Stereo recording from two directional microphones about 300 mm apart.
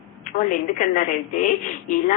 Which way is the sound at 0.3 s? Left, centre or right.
Left.